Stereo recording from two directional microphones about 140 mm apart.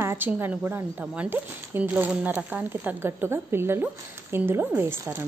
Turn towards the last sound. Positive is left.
turn(degrees=-15)  # may be behind; listen again after turning